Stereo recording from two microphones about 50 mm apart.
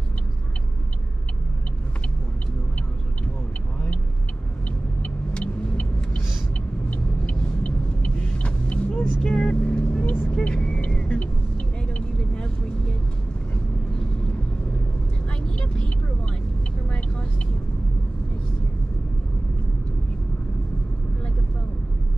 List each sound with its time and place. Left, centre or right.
4.6 s car: left
6.9 s vehicle: left
15.2 s vehicle: left